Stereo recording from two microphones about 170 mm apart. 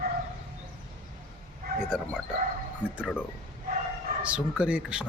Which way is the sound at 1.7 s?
65° right (ahead or behind).